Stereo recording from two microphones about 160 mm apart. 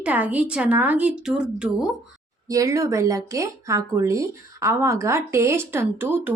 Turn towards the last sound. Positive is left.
turn(degrees=-15)  # may be behind; listen again after turning